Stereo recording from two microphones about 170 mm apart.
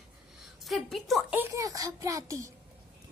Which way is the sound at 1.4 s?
15° right (ahead or behind).